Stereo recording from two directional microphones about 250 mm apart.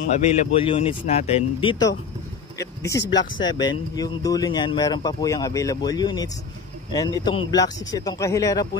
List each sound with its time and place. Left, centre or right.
0.1 s speech: left